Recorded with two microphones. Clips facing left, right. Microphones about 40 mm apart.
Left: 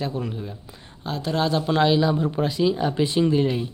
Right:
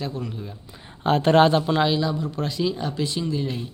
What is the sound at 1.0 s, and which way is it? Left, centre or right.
Speech, right.